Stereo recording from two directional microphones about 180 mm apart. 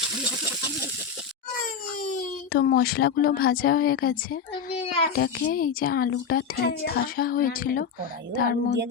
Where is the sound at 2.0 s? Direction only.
55° left (ahead or behind).